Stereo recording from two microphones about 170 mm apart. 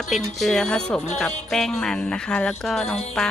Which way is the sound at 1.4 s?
Centre (ahead or behind).